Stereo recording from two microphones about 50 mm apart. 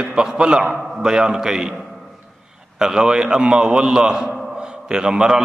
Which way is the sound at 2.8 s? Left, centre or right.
Centre.